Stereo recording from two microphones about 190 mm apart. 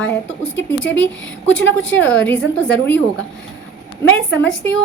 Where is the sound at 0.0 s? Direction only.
10° left (ahead or behind).